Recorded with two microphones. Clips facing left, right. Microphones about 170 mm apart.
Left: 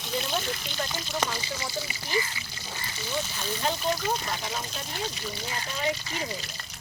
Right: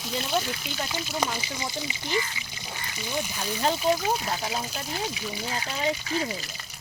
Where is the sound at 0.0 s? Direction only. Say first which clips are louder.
Right 2 dB; 5° right (ahead or behind).